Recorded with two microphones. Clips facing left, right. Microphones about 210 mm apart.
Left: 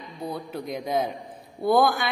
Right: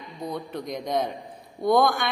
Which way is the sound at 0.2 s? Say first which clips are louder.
Even; 5° left (ahead or behind).